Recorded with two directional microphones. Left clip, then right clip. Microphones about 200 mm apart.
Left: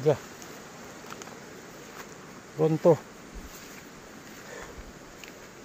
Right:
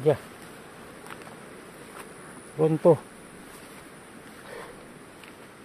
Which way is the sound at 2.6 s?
15° right (ahead or behind).